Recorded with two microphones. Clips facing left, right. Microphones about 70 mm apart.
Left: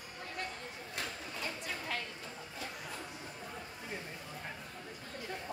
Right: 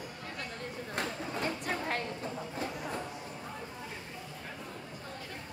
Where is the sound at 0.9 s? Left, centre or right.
Right.